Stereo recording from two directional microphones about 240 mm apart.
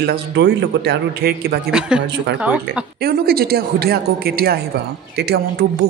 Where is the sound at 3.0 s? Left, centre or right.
Right.